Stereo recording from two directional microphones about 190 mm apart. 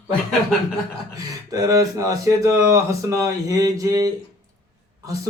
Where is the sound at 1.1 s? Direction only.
20° right (ahead or behind).